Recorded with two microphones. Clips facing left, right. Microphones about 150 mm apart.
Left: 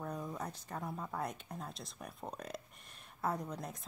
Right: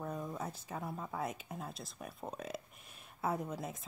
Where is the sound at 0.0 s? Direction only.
Centre (ahead or behind).